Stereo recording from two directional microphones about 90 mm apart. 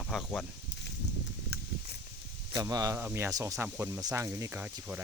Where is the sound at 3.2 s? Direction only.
35° right (ahead or behind).